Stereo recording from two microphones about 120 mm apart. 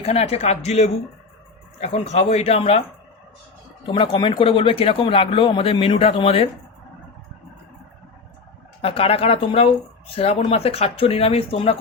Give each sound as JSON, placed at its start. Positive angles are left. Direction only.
{"t": 0.0, "sound": "speech", "side_deg": 60}
{"t": 3.8, "sound": "speech", "side_deg": 45}
{"t": 8.8, "sound": "speech", "side_deg": 50}